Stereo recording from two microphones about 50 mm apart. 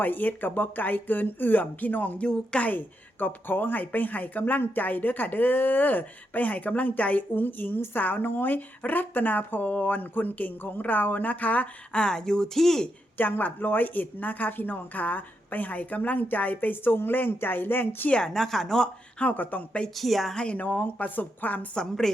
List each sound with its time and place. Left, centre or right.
0.0 s speech: left
2.2 s speech: centre
2.6 s speech: left; by 12.9 s centre
13.1 s speech: left
18.1 s speech: centre
19.2 s speech: left
20.0 s a woman's voice: centre
20.3 s speech: centre
20.6 s speech: left
21.8 s speech: centre